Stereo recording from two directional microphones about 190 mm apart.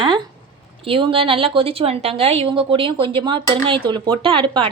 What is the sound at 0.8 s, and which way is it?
A woman's voice, 30° right (ahead or behind).